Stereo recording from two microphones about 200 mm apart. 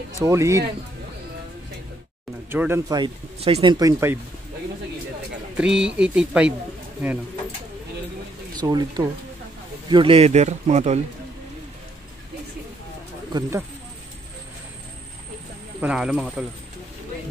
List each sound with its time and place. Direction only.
0.2 s speech: 15° right (ahead or behind)
2.5 s speech: 10° right (ahead or behind)
3.0 s speech: 30° right (ahead or behind)
5.6 s speech: 5° right (ahead or behind)
8.5 s speech: 20° right (ahead or behind)
13.3 s speech: 15° right (ahead or behind)
15.8 s speech: 5° right (ahead or behind)